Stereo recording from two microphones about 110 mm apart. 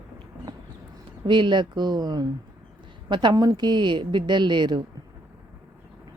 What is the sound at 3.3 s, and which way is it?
Speech, 35° right (ahead or behind).